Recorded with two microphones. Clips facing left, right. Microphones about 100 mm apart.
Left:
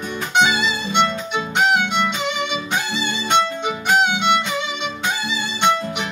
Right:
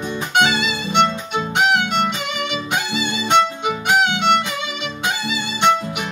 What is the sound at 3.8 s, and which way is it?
Violin, centre (ahead or behind).